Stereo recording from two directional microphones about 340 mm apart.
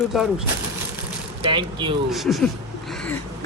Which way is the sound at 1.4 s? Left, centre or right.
Centre.